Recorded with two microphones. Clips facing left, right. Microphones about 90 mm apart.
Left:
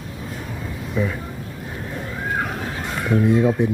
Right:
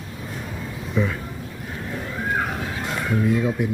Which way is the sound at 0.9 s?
Centre (ahead or behind).